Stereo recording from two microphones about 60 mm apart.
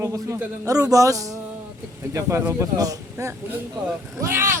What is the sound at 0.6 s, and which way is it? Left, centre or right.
Speech, right.